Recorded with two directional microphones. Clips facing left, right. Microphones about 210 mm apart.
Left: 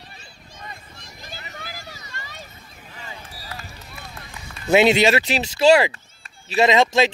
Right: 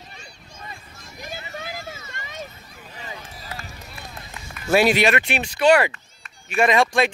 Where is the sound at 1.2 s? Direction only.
20° right (ahead or behind).